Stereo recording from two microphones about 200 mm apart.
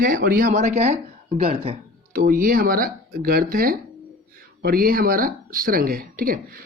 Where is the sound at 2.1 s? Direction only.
45° right (ahead or behind).